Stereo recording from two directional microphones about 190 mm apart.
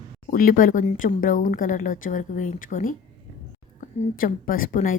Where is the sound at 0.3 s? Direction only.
45° left (ahead or behind).